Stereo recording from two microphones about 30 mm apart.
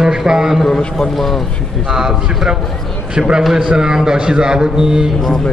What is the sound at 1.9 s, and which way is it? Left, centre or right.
Speech, centre.